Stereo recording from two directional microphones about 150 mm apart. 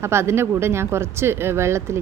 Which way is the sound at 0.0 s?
15° right (ahead or behind).